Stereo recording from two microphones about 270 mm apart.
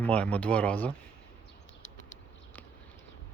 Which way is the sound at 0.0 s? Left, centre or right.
Centre.